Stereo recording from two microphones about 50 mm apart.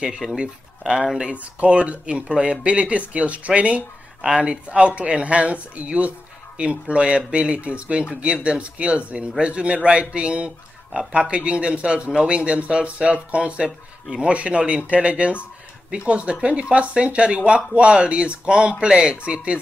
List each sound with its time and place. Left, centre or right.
0.4 s speech: right
1.3 s speech: right